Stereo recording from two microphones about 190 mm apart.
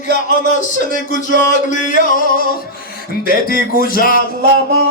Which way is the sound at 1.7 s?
45° left (ahead or behind).